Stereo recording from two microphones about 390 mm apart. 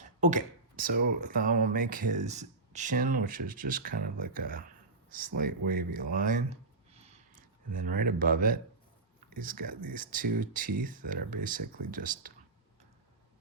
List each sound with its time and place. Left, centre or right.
0.2 s speech: centre
6.1 s a sound: centre
7.7 s speech: right